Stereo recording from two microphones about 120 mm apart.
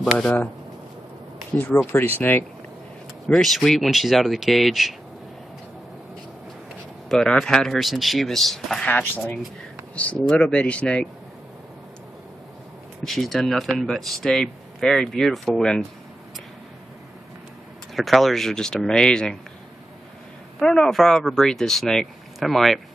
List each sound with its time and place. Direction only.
0.0 s speech: 5° left (ahead or behind)
1.9 s speech: 20° left (ahead or behind)
3.3 s speech: centre (ahead or behind)
7.1 s speech: 5° left (ahead or behind)
8.8 s speech: 15° left (ahead or behind)
13.0 s speech: centre (ahead or behind)
17.9 s speech: centre (ahead or behind)
20.5 s speech: 5° left (ahead or behind)